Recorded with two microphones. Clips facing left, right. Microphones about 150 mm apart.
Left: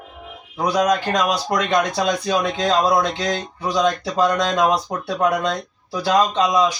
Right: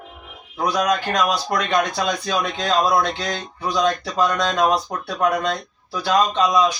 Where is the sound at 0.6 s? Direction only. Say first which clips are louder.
Left 2 dB; 20° left (ahead or behind).